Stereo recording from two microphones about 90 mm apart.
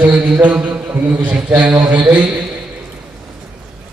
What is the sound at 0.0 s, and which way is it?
A man's voice, 15° right (ahead or behind).